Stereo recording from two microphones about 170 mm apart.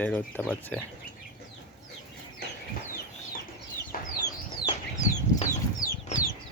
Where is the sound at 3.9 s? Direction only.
55° left (ahead or behind).